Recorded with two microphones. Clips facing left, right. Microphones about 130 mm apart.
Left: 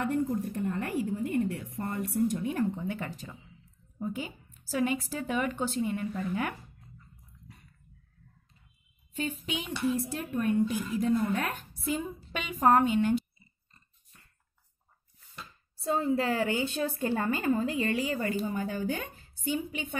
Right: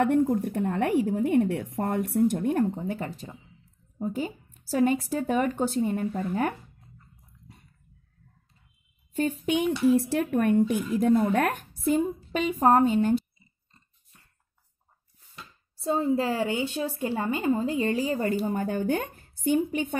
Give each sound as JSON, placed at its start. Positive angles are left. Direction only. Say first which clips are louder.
{"t": 0.0, "sound": "a woman's voice", "louder": "right 7 dB", "side_deg": -70}
{"t": 2.8, "sound": "a woman's voice", "louder": "right 3 dB", "side_deg": -35}
{"t": 9.1, "sound": "a woman's voice", "louder": "right 8 dB", "side_deg": -50}
{"t": 9.9, "sound": "a woman's voice", "louder": "right 8 dB", "side_deg": -70}
{"t": 12.0, "sound": "a woman's voice", "louder": "right 10 dB", "side_deg": -35}
{"t": 16.0, "sound": "a woman's voice", "louder": "right 2 dB", "side_deg": -20}